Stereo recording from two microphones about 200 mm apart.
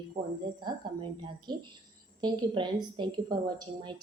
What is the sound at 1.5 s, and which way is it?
A woman's voice, 20° right (ahead or behind).